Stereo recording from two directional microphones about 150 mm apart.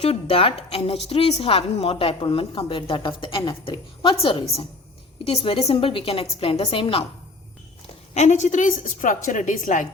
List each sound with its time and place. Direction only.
0.0 s a woman's voice: 40° left (ahead or behind)
8.1 s a woman's voice: 50° left (ahead or behind)